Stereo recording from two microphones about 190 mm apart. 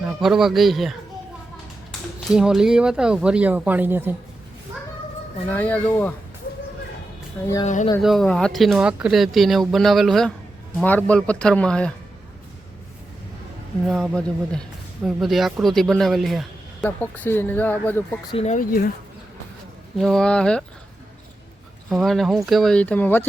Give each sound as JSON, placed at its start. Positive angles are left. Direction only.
{"t": 0.0, "sound": "speech", "side_deg": 0}
{"t": 2.2, "sound": "speech", "side_deg": 0}
{"t": 5.5, "sound": "a man's voice", "side_deg": 10}
{"t": 7.6, "sound": "speech", "side_deg": 40}
{"t": 8.0, "sound": "a man's voice", "side_deg": 0}
{"t": 13.8, "sound": "speech", "side_deg": 0}
{"t": 18.3, "sound": "speech", "side_deg": 35}
{"t": 20.0, "sound": "speech", "side_deg": 0}
{"t": 21.8, "sound": "a man's voice", "side_deg": 0}